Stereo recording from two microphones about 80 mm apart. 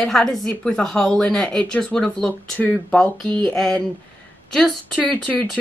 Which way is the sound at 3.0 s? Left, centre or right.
Centre.